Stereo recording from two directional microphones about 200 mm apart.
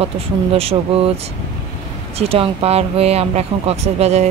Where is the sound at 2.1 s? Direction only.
30° right (ahead or behind).